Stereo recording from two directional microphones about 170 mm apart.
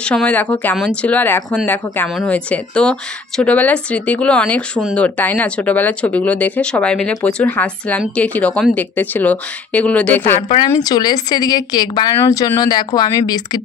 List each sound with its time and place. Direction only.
0.0 s speech: 5° left (ahead or behind)
10.3 s speech: 35° left (ahead or behind)
10.7 s speech: 20° left (ahead or behind)